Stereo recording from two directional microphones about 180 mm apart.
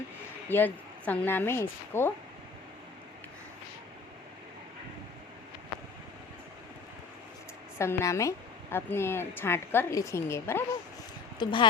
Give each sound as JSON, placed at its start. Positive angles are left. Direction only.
{"t": 0.4, "sound": "a woman's voice", "side_deg": 10}
{"t": 7.8, "sound": "a woman's voice", "side_deg": 15}
{"t": 11.3, "sound": "speech", "side_deg": 25}